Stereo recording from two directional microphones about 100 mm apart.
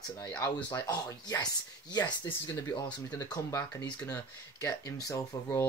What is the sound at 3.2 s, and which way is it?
Speech, 40° left (ahead or behind).